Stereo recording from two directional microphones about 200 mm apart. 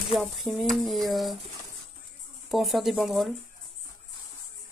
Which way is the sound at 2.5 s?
Centre (ahead or behind).